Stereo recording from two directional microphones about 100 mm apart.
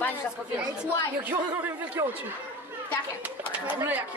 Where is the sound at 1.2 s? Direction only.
20° right (ahead or behind).